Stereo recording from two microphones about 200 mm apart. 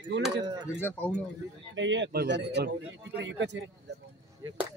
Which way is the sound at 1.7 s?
65° right (ahead or behind).